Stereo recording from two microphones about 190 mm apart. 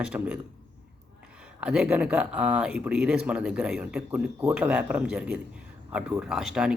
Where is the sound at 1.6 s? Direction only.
5° right (ahead or behind).